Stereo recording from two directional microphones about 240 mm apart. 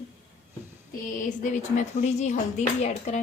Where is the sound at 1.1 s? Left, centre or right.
Left.